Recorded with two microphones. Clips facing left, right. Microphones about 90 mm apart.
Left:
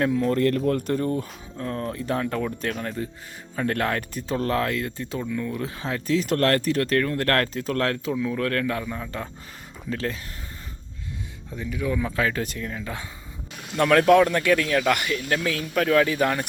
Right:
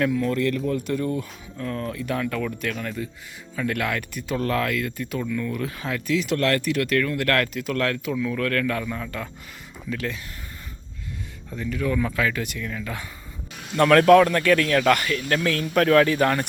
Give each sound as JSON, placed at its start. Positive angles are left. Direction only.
{"t": 0.0, "sound": "speech", "side_deg": 35}
{"t": 9.9, "sound": "speech", "side_deg": 35}
{"t": 11.5, "sound": "speech", "side_deg": 15}
{"t": 12.1, "sound": "speech", "side_deg": 35}
{"t": 13.7, "sound": "speech", "side_deg": 10}